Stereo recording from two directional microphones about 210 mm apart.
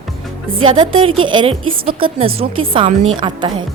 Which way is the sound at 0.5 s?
25° right (ahead or behind).